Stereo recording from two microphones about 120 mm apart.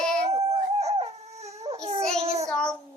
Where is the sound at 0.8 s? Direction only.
60° right (ahead or behind).